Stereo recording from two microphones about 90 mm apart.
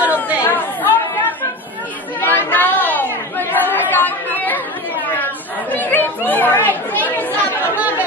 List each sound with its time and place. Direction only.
0.0 s chatter: 15° right (ahead or behind)
0.5 s chatter: 20° left (ahead or behind)